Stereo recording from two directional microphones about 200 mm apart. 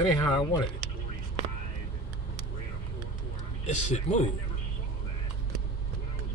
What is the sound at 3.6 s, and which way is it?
Speech, 35° left (ahead or behind).